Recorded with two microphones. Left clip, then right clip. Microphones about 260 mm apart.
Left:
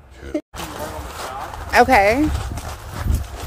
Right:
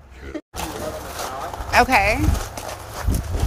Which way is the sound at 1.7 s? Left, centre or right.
Left.